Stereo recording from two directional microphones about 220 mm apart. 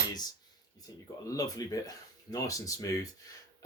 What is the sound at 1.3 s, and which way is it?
Speech, 15° left (ahead or behind).